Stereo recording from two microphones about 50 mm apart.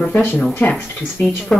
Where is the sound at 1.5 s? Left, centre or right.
Centre.